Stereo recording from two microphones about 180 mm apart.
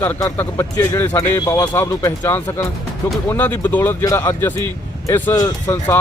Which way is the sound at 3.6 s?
10° left (ahead or behind).